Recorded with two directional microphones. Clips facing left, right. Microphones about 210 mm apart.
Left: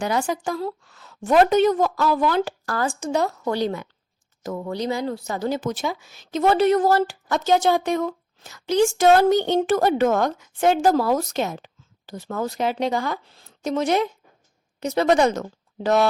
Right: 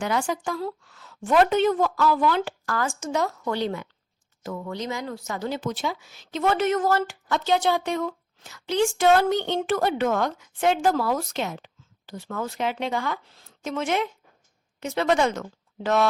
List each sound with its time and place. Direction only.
0.0 s a woman's voice: 40° left (ahead or behind)